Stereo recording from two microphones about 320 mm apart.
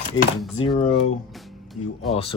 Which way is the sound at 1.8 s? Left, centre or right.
Left.